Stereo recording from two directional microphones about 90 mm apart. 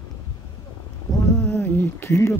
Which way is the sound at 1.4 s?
15° left (ahead or behind).